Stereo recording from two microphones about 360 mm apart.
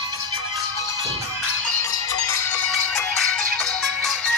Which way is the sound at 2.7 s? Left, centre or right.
Centre.